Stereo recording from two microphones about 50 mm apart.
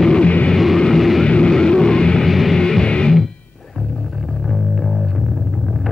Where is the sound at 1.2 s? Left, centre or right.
Centre.